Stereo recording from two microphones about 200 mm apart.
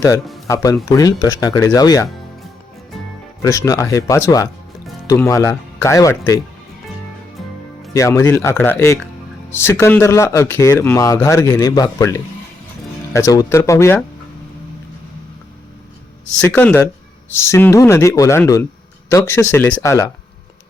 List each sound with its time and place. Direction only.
0.5 s speech: 15° left (ahead or behind)
3.4 s speech: 15° left (ahead or behind)
7.9 s speech: 15° left (ahead or behind)
16.4 s speech: 10° left (ahead or behind)